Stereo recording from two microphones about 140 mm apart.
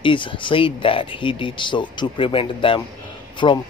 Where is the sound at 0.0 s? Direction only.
35° left (ahead or behind).